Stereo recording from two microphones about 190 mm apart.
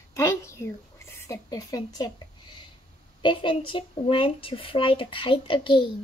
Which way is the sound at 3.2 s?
25° left (ahead or behind).